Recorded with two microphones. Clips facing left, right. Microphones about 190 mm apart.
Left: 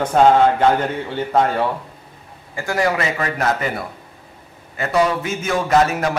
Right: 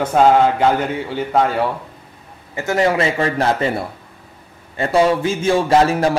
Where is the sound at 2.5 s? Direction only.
20° right (ahead or behind).